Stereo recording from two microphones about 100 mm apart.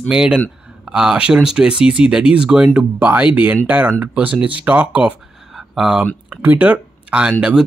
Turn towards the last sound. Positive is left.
turn(degrees=-10)  # may be behind; listen again after turning